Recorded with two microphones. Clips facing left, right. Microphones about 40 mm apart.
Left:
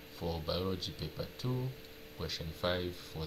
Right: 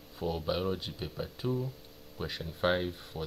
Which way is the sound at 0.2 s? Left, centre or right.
Centre.